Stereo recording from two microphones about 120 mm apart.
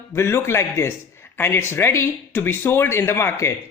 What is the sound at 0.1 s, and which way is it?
A man's voice, 20° left (ahead or behind).